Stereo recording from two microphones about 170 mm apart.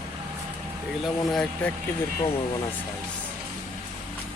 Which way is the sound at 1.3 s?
5° left (ahead or behind).